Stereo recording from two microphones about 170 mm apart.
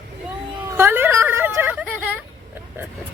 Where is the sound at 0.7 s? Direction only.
15° right (ahead or behind).